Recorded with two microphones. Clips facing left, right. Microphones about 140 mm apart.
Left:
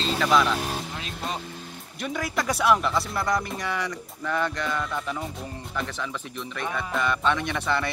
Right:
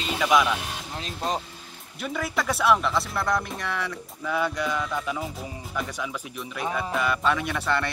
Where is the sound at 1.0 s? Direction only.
40° right (ahead or behind).